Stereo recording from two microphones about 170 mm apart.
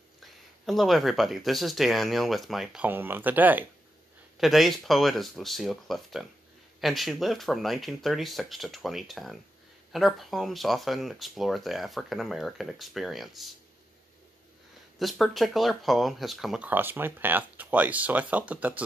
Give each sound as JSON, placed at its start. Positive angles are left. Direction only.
{"t": 0.2, "sound": "speech", "side_deg": 0}
{"t": 15.0, "sound": "speech", "side_deg": 0}